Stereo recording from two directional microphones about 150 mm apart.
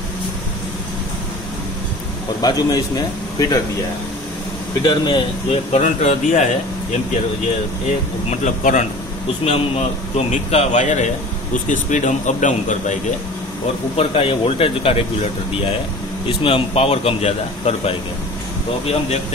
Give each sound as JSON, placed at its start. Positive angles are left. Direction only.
{"t": 2.4, "sound": "a man's voice", "side_deg": 25}
{"t": 4.8, "sound": "a man's voice", "side_deg": 30}
{"t": 8.3, "sound": "speech", "side_deg": 55}
{"t": 9.4, "sound": "a man's voice", "side_deg": 45}
{"t": 13.9, "sound": "a man's voice", "side_deg": 40}
{"t": 16.3, "sound": "a man's voice", "side_deg": 40}